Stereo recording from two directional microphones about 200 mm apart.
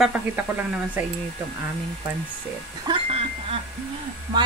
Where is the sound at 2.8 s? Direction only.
30° right (ahead or behind).